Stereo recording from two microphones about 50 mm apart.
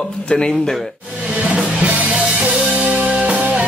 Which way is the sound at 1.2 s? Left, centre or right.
Right.